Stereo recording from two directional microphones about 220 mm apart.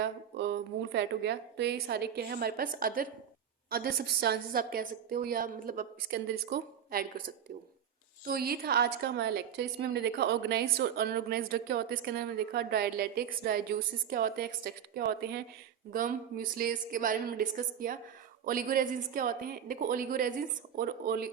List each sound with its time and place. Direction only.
0.0 s a woman's voice: 50° right (ahead or behind)
8.2 s a woman's voice: 45° right (ahead or behind)